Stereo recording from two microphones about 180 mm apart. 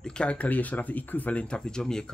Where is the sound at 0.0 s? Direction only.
5° left (ahead or behind).